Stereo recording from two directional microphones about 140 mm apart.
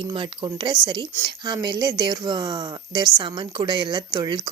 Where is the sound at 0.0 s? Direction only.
35° right (ahead or behind).